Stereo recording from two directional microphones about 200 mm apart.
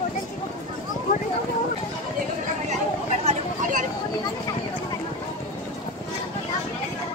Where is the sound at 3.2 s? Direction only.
40° right (ahead or behind).